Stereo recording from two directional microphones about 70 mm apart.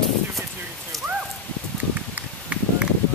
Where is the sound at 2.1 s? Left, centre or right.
Centre.